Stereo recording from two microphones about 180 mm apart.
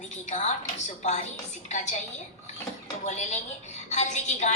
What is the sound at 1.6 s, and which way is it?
Speech, 40° left (ahead or behind).